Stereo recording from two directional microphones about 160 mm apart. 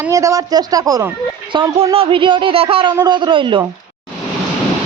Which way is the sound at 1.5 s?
35° right (ahead or behind).